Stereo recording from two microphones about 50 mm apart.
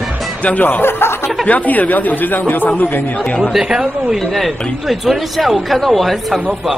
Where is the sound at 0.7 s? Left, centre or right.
Left.